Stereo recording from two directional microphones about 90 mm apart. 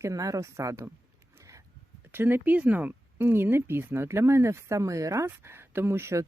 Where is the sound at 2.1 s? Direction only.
25° right (ahead or behind).